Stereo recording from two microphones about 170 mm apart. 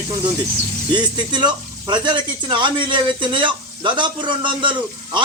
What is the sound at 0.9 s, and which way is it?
Speech, 25° right (ahead or behind).